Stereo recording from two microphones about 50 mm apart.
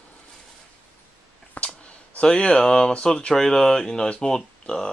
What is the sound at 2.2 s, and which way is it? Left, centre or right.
Speech, left.